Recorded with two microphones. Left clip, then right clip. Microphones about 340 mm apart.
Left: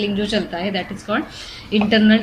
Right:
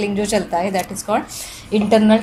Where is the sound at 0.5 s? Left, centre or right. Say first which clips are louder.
Right 4 dB; right.